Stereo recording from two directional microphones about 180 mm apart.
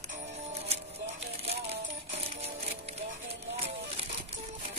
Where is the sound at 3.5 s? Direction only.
35° right (ahead or behind).